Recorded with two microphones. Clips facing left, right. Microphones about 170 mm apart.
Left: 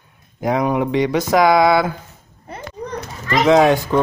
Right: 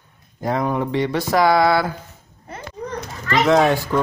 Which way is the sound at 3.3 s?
15° left (ahead or behind).